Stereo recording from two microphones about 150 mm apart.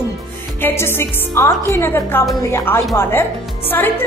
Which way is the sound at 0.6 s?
15° left (ahead or behind).